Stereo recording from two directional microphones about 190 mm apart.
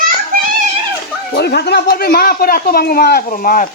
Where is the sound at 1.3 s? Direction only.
60° left (ahead or behind).